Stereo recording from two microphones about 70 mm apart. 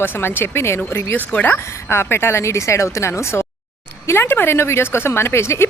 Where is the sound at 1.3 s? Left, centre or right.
Left.